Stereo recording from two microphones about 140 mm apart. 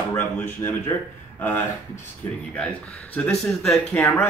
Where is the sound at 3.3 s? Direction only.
5° left (ahead or behind).